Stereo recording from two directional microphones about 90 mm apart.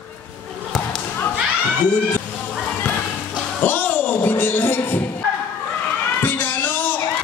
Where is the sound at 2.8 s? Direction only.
10° left (ahead or behind).